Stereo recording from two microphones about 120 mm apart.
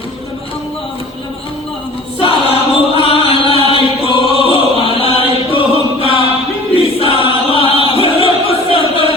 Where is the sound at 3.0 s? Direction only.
50° left (ahead or behind).